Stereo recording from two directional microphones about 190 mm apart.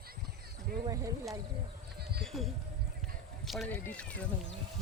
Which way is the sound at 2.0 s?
55° right (ahead or behind).